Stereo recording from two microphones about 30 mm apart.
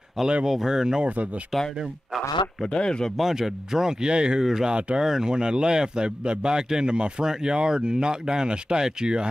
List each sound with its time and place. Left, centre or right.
0.2 s speech: centre
0.5 s a man's voice: centre
1.0 s speech: right
2.7 s speech: left
3.2 s a man's voice: centre
4.0 s speech: right
4.4 s a man's voice: centre
4.6 s a man's voice: right